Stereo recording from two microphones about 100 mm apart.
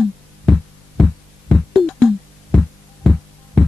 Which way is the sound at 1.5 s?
Centre (ahead or behind).